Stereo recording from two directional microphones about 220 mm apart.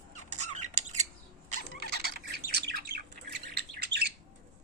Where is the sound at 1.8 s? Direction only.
45° right (ahead or behind).